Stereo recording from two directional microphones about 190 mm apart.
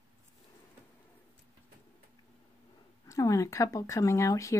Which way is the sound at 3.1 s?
15° left (ahead or behind).